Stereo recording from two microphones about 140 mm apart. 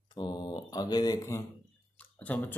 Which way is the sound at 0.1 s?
30° left (ahead or behind).